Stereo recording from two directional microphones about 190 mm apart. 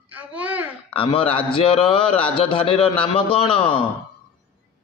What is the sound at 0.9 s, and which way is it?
A man's voice, 30° left (ahead or behind).